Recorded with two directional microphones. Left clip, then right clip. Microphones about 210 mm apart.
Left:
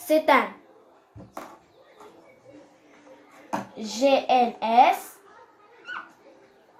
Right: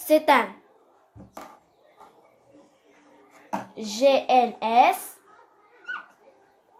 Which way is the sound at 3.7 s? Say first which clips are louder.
Right 2 dB; 50° right (ahead or behind).